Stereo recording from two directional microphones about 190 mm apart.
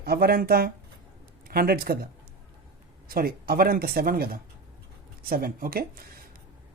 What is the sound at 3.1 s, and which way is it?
Speech, 50° right (ahead or behind).